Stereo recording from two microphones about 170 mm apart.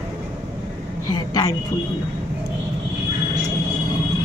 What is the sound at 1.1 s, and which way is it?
Speech, 20° left (ahead or behind).